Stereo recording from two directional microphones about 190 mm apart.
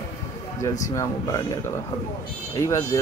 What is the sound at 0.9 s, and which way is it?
Speech, 15° left (ahead or behind).